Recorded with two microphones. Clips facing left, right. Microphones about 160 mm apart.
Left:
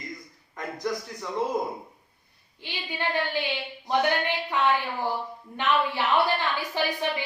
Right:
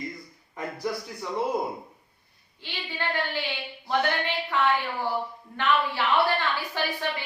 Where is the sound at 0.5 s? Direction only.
10° right (ahead or behind).